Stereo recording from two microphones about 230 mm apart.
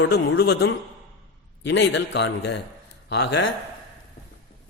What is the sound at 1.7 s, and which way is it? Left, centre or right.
A man's voice, left.